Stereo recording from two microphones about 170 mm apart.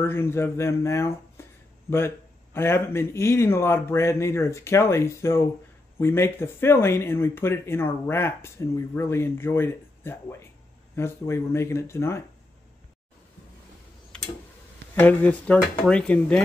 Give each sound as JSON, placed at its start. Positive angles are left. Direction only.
{"t": 0.0, "sound": "speech", "side_deg": 15}
{"t": 14.1, "sound": "tick-tock", "side_deg": 5}
{"t": 15.0, "sound": "speech", "side_deg": 10}